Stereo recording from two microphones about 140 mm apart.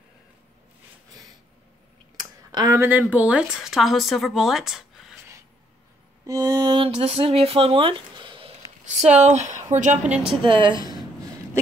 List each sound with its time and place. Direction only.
2.1 s a sound: 30° right (ahead or behind)
2.8 s speech: 10° right (ahead or behind)
6.2 s music: 25° right (ahead or behind)
6.8 s speech: 40° right (ahead or behind)
9.1 s a woman's voice: 55° right (ahead or behind)
10.0 s speech: 10° right (ahead or behind)
10.4 s a woman's voice: 35° right (ahead or behind)